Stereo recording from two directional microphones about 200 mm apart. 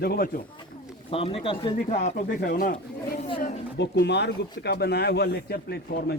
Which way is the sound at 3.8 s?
60° left (ahead or behind).